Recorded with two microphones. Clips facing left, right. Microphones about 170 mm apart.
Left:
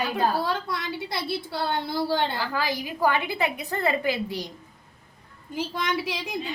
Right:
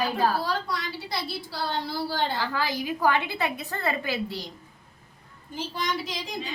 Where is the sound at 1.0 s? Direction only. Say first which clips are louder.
Left 3 dB; 55° left (ahead or behind).